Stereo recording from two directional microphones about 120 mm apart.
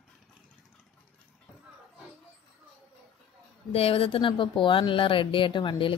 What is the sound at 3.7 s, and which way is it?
Speech, 55° left (ahead or behind).